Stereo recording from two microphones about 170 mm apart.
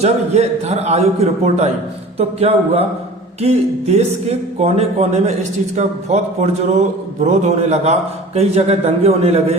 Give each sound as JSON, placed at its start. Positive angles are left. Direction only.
{"t": 0.0, "sound": "speech", "side_deg": -40}